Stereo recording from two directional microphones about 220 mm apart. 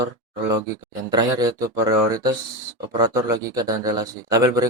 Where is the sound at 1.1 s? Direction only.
15° right (ahead or behind).